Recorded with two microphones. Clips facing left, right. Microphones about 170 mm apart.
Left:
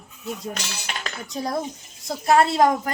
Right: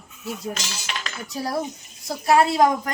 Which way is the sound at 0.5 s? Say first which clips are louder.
Even; 60° left (ahead or behind).